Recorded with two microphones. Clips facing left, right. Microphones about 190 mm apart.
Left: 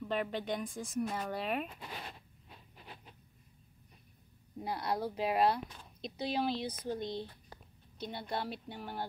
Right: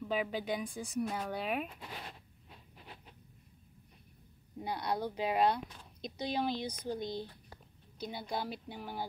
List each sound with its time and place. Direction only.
0.0 s speech: 5° right (ahead or behind)
4.6 s speech: centre (ahead or behind)